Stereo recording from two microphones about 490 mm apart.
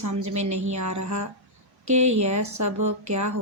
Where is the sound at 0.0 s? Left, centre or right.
Right.